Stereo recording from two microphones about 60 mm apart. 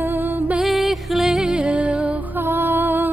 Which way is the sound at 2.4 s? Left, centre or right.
Right.